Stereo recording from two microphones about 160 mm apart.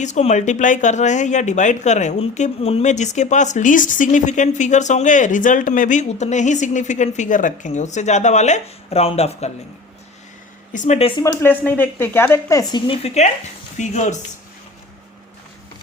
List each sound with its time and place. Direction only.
0.0 s speech: 45° left (ahead or behind)
10.7 s speech: 50° left (ahead or behind)
11.2 s speech: 20° left (ahead or behind)
13.0 s speech: 40° left (ahead or behind)